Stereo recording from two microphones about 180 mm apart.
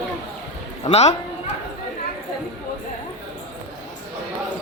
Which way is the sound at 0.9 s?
35° left (ahead or behind).